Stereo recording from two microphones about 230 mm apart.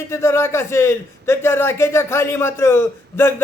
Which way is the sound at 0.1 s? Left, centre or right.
Centre.